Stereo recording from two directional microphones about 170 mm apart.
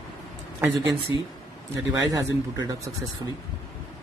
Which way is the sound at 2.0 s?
25° right (ahead or behind).